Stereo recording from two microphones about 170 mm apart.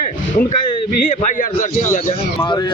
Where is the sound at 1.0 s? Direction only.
50° left (ahead or behind).